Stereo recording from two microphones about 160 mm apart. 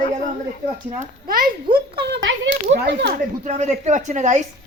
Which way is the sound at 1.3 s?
65° right (ahead or behind).